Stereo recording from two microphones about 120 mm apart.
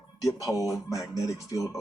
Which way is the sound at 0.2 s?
25° left (ahead or behind).